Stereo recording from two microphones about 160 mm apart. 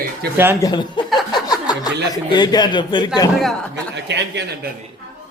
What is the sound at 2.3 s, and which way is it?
Speech, 25° left (ahead or behind).